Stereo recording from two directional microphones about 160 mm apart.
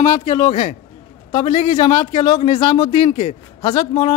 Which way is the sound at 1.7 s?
25° left (ahead or behind).